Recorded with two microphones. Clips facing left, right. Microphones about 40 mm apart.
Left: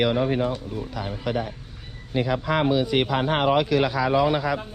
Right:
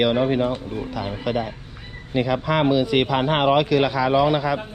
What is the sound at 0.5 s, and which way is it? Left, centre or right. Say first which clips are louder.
Speech: right 3 dB; right.